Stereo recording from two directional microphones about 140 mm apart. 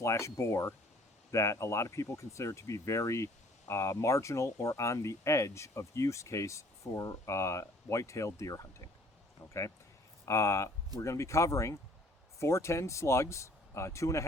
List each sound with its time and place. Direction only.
0.0 s speech: 20° left (ahead or behind)